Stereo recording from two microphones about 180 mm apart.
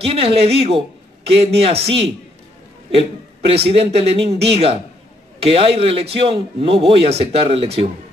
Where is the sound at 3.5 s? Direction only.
35° right (ahead or behind).